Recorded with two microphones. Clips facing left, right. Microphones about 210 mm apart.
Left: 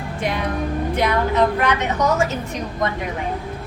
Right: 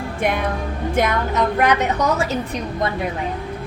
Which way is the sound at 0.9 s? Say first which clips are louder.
Left 1 dB; 45° right (ahead or behind).